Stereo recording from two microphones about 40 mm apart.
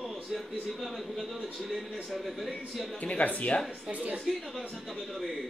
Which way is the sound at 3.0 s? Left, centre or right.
Left.